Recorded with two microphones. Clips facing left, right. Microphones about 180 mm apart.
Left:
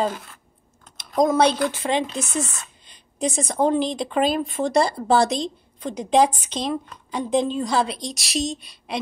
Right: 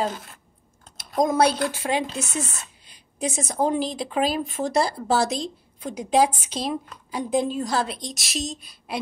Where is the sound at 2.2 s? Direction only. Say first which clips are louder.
Left 3 dB; 30° right (ahead or behind).